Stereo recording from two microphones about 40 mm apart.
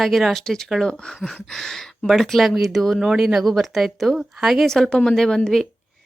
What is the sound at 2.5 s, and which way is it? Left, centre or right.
A woman's voice, centre.